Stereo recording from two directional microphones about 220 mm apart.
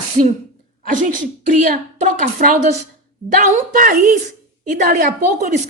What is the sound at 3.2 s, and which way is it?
A woman's voice, 35° right (ahead or behind).